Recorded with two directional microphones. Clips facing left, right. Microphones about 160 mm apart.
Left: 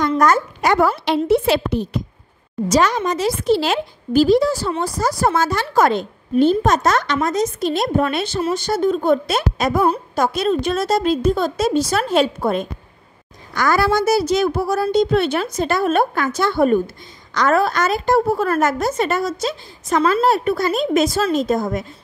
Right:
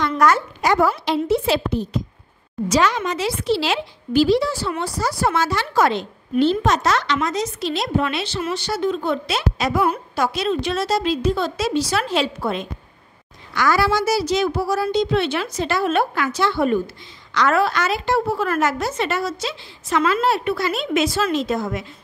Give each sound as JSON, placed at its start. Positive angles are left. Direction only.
{"t": 0.2, "sound": "a woman's voice", "side_deg": 50}
{"t": 2.7, "sound": "a woman's voice", "side_deg": 45}